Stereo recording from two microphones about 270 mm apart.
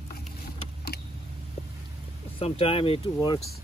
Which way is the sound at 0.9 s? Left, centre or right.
Left.